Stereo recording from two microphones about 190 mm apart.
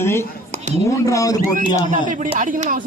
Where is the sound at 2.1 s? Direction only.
40° right (ahead or behind).